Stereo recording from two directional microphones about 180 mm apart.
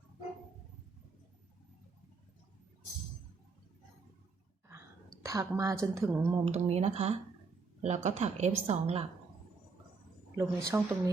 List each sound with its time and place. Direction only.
5.2 s speech: 20° right (ahead or behind)
6.4 s a woman's voice: 35° right (ahead or behind)
10.3 s speech: 15° right (ahead or behind)